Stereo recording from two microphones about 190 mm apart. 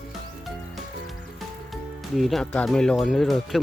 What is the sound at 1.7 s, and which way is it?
Speech, centre (ahead or behind).